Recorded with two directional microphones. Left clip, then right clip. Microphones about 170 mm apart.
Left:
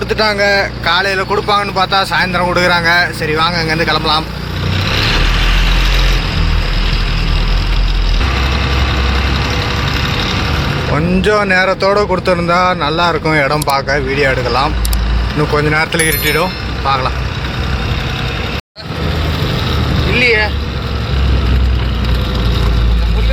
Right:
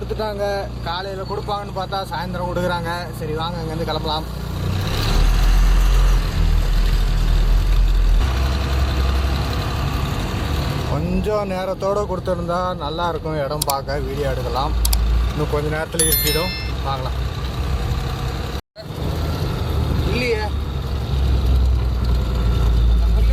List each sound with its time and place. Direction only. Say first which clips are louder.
0.2 s speech: left 11 dB; 10° left (ahead or behind)
10.9 s speech: left 9 dB; 5° left (ahead or behind)
13.3 s speech: left 10 dB; 20° left (ahead or behind)
13.7 s speech: left 10 dB; 5° left (ahead or behind)
20.1 s vehicle: left 11 dB; 10° right (ahead or behind)